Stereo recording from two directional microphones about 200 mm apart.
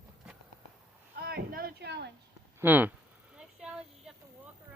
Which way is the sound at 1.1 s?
50° right (ahead or behind).